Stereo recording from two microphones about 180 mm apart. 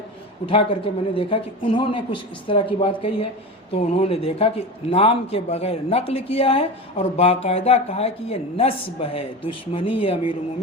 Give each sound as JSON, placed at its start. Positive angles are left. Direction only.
{"t": 0.5, "sound": "speech", "side_deg": 30}